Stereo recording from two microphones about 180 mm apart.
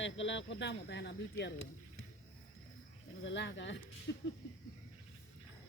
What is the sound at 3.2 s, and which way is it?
Speech, 90° left.